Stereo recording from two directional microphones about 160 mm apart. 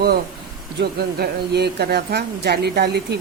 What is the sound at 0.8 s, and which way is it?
Speech, 85° right.